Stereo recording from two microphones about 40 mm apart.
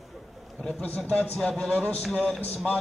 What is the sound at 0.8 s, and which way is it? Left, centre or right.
Speech, left.